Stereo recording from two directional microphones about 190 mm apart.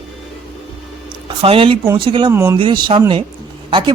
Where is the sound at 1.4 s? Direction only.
30° right (ahead or behind).